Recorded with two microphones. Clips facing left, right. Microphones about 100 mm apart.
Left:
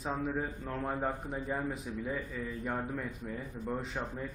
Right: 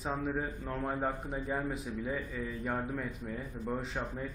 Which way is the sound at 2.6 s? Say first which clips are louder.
Right 1 dB; 5° right (ahead or behind).